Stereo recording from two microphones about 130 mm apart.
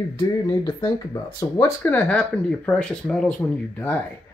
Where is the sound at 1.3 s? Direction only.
30° left (ahead or behind).